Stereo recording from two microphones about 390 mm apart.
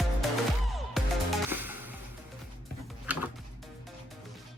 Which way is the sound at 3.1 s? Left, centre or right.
Centre.